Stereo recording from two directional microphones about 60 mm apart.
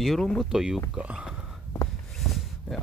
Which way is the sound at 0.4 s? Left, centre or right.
Centre.